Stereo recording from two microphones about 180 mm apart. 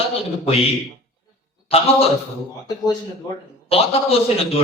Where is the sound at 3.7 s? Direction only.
35° left (ahead or behind).